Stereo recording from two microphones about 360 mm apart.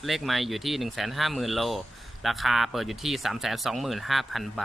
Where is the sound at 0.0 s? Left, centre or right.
Centre.